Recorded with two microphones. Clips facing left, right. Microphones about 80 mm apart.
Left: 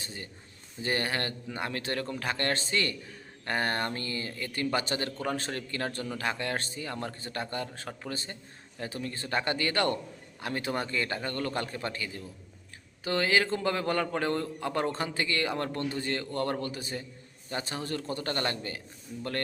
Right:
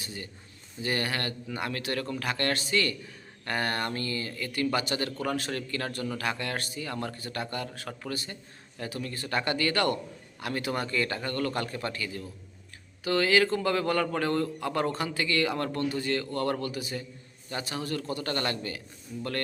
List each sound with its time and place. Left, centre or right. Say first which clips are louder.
0.0 s a man's voice: right 2 dB; left